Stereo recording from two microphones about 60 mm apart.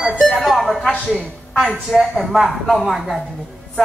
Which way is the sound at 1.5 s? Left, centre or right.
Centre.